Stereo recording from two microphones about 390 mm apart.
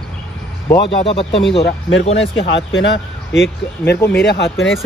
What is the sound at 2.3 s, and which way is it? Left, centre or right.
Speech, left.